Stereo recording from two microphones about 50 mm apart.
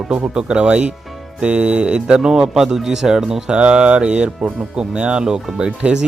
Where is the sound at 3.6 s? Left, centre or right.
Right.